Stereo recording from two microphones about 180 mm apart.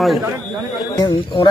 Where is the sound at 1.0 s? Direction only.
25° left (ahead or behind).